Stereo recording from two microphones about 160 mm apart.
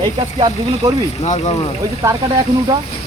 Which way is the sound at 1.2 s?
45° left (ahead or behind).